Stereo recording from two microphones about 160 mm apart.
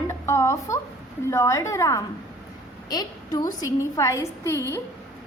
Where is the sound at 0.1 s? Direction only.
20° left (ahead or behind).